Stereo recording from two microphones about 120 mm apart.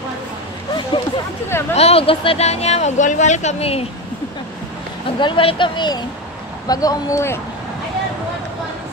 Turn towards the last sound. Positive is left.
turn(degrees=25)  # may be behind; listen again after turning